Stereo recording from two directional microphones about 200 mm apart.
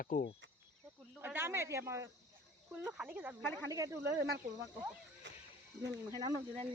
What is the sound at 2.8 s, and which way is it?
Speech, 5° right (ahead or behind).